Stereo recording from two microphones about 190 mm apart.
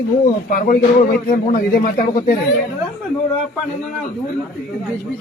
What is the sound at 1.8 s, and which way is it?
Speech, 45° left (ahead or behind).